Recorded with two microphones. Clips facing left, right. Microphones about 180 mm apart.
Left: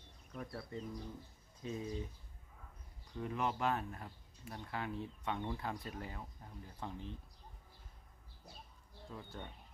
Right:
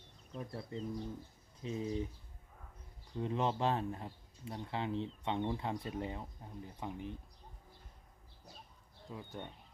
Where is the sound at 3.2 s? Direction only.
25° right (ahead or behind).